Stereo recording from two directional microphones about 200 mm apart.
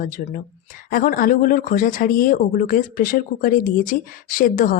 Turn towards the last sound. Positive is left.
turn(degrees=45)  # may be behind; listen again after turning